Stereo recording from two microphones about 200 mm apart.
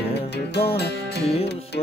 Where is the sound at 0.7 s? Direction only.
55° left (ahead or behind).